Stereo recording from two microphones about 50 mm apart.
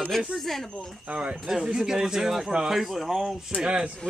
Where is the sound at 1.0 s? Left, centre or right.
Right.